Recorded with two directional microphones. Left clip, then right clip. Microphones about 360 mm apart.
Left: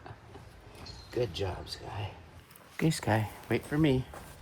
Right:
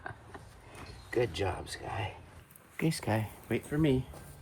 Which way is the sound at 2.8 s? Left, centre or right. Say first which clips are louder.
Left 3 dB; left.